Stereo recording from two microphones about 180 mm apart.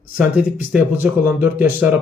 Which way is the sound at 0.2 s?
5° right (ahead or behind).